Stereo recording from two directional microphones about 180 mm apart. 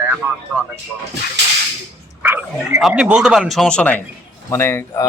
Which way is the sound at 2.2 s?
10° right (ahead or behind).